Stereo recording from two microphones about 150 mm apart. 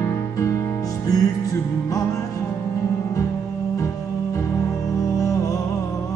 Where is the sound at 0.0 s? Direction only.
20° left (ahead or behind).